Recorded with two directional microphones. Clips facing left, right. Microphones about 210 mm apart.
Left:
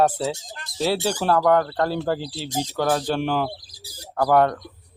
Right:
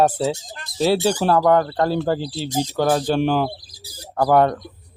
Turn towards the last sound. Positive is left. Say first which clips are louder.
# right 2 dB
turn(degrees=-20)  # may be behind; listen again after turning